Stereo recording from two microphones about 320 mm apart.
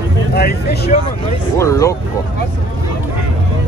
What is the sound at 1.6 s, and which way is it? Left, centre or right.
Speech, centre.